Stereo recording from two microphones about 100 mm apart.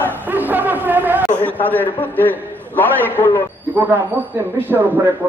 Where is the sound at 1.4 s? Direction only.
15° left (ahead or behind).